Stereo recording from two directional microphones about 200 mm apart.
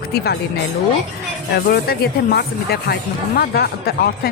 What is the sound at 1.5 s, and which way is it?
Speech, 50° left (ahead or behind).